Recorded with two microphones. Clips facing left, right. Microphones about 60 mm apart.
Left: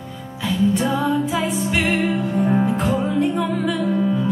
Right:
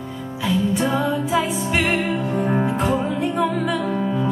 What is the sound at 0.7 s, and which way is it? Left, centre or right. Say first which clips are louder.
Music: left 1 dB; centre.